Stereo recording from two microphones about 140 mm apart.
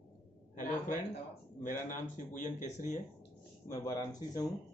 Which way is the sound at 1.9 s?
65° left (ahead or behind).